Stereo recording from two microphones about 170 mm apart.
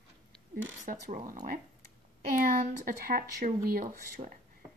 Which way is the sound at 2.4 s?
55° right (ahead or behind).